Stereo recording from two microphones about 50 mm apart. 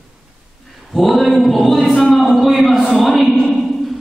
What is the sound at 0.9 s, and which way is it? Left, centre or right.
A man's voice, centre.